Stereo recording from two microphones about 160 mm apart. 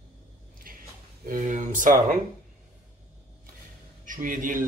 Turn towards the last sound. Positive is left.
turn(degrees=-55)  # may be behind; listen again after turning